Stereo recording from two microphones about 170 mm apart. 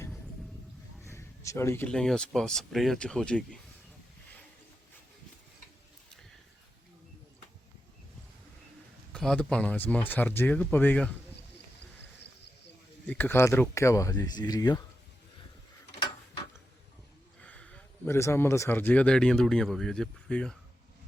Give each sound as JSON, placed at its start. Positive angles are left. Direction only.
{"t": 1.0, "sound": "speech", "side_deg": 15}
{"t": 9.1, "sound": "speech", "side_deg": 5}
{"t": 13.1, "sound": "speech", "side_deg": 10}
{"t": 17.4, "sound": "speech", "side_deg": 5}